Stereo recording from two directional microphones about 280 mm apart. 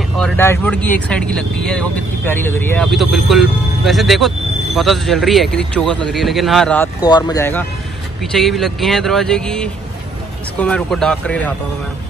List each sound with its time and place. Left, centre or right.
0.2 s speech: centre